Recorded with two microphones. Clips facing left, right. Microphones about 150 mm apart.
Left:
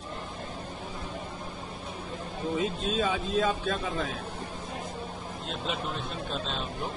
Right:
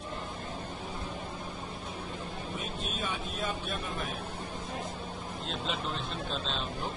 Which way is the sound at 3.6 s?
90° left.